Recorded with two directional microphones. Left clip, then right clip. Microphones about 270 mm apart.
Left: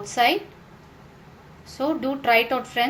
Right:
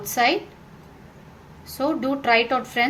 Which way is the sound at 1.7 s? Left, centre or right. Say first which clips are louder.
Right 1 dB; right.